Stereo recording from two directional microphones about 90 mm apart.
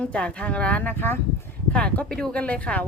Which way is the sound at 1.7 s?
10° left (ahead or behind).